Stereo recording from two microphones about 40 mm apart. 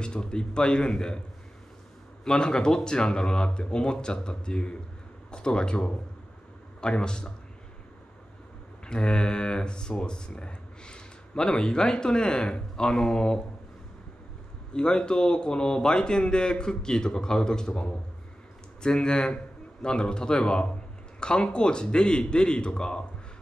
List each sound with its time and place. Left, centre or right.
0.0 s a man's voice: left
2.2 s a man's voice: left
8.8 s speech: left
14.7 s a man's voice: left